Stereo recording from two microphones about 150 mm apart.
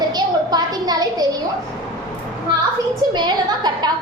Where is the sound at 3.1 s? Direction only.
30° right (ahead or behind).